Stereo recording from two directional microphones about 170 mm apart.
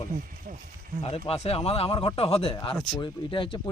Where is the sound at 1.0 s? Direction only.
35° left (ahead or behind).